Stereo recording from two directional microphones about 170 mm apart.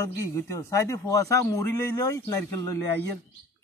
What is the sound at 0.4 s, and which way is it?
A man's voice, 15° left (ahead or behind).